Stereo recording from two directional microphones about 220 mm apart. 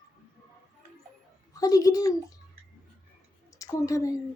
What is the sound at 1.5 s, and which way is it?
Speech, 15° left (ahead or behind).